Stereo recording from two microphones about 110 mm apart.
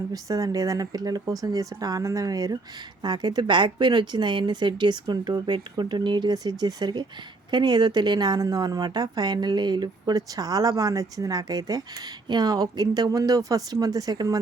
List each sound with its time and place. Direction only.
0.1 s a woman's voice: 30° right (ahead or behind)